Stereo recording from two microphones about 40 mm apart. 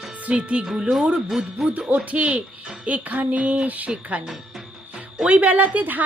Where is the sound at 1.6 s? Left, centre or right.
Right.